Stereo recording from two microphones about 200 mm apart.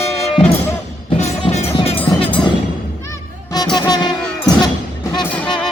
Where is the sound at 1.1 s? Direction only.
30° left (ahead or behind).